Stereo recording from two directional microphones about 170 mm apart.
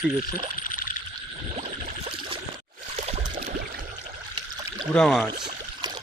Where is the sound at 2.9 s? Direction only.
40° right (ahead or behind).